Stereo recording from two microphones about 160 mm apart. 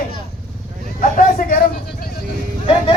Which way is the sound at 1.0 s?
60° left (ahead or behind).